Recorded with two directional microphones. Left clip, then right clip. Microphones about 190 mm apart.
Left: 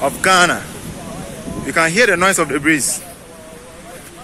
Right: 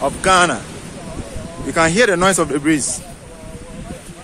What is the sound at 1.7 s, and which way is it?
Speech, 20° right (ahead or behind).